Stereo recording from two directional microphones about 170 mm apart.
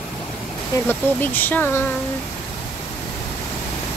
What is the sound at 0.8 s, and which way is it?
Speech, 10° left (ahead or behind).